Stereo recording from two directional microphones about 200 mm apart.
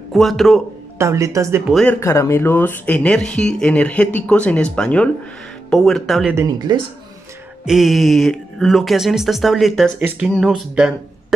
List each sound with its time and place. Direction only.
0.1 s speech: centre (ahead or behind)
0.9 s speech: 15° right (ahead or behind)
1.7 s speech: 5° left (ahead or behind)
2.0 s speech: 15° left (ahead or behind)
6.3 s speech: 15° right (ahead or behind)
7.6 s speech: centre (ahead or behind)